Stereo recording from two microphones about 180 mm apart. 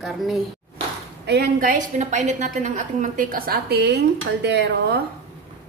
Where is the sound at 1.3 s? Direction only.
60° right (ahead or behind).